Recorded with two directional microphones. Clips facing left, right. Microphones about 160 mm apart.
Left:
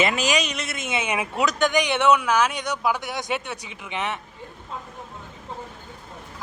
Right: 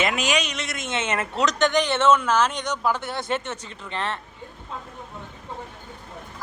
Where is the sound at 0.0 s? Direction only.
5° left (ahead or behind).